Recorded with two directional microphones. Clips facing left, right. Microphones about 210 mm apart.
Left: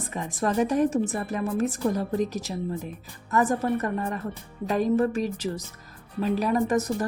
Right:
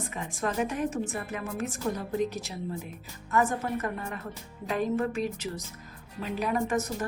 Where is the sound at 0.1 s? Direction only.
40° left (ahead or behind).